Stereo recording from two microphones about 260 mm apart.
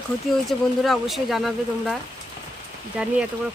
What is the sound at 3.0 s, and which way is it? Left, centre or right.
Speech, centre.